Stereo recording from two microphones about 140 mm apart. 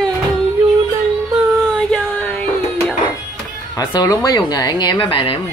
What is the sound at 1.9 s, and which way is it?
Music, 5° left (ahead or behind).